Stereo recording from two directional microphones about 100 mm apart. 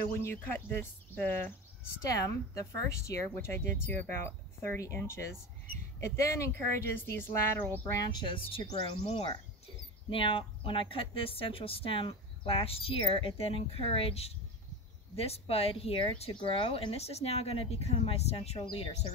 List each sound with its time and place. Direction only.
0.2 s speech: 25° left (ahead or behind)
2.0 s speech: 35° left (ahead or behind); by 7.8 s 20° left (ahead or behind)
8.0 s speech: 45° left (ahead or behind)
8.4 s speech: 65° left (ahead or behind); by 18.6 s 90° left